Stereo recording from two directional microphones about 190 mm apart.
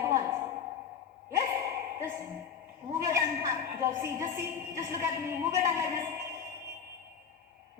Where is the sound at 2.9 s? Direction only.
15° right (ahead or behind).